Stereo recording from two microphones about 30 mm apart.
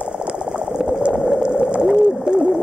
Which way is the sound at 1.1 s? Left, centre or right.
Centre.